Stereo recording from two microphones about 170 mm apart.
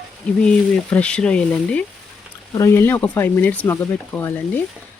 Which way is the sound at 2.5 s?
20° left (ahead or behind).